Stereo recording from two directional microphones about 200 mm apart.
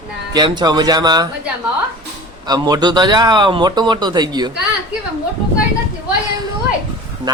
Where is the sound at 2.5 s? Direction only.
20° right (ahead or behind).